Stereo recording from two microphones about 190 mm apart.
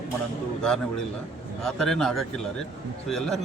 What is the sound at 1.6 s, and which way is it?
Speech, centre (ahead or behind).